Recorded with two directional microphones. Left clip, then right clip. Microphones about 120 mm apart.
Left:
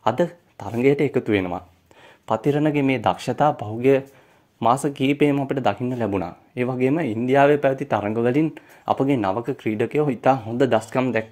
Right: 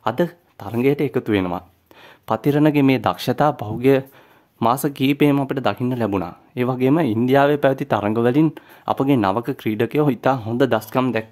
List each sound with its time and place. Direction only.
0.0 s speech: 15° right (ahead or behind); by 5.5 s 35° right (ahead or behind)
5.5 s speech: 20° right (ahead or behind)
5.8 s speech: 35° right (ahead or behind)